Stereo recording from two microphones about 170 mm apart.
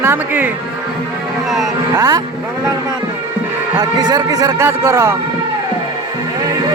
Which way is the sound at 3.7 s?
25° right (ahead or behind).